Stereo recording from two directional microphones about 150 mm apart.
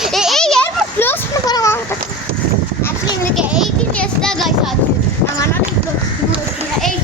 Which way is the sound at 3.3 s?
5° right (ahead or behind).